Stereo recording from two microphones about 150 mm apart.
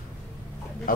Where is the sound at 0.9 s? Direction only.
70° left (ahead or behind).